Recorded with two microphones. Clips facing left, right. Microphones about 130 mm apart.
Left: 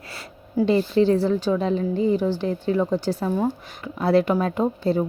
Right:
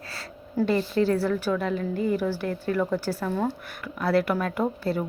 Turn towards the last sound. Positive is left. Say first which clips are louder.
# left 4 dB
turn(degrees=25)  # may be behind; listen again after turning